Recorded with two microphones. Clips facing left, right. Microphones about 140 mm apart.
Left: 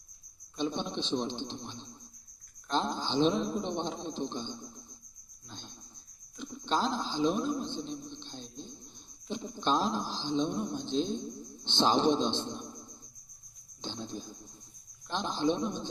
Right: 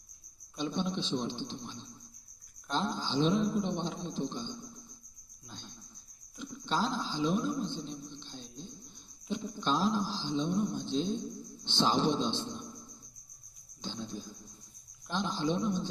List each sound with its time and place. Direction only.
0.6 s speech: 20° left (ahead or behind)
5.5 s a sound: 20° left (ahead or behind)
9.3 s speech: 20° left (ahead or behind)
13.8 s speech: 20° left (ahead or behind)